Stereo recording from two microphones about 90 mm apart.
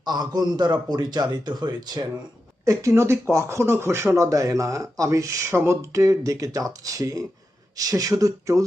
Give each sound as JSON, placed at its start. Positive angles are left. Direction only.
{"t": 0.0, "sound": "a man's voice", "side_deg": -50}
{"t": 2.6, "sound": "speech", "side_deg": -35}